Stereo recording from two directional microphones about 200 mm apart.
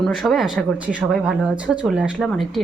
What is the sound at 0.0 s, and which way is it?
A woman's voice, centre (ahead or behind).